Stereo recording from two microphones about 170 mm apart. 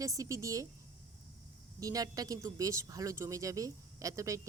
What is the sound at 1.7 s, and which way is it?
Speech, 20° right (ahead or behind).